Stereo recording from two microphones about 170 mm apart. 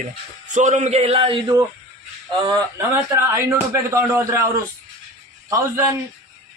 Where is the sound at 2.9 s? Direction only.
15° right (ahead or behind).